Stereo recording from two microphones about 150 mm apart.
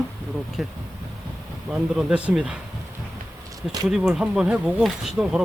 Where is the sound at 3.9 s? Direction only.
5° right (ahead or behind).